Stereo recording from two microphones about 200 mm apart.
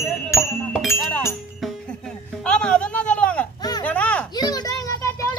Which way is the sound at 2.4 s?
5° left (ahead or behind).